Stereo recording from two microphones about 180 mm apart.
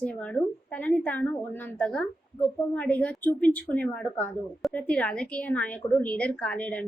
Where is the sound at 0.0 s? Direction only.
5° left (ahead or behind).